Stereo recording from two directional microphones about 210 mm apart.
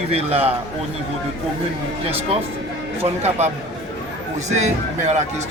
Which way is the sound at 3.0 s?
30° right (ahead or behind).